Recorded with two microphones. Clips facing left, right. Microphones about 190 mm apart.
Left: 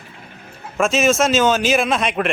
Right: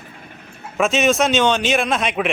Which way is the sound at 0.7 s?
Centre (ahead or behind).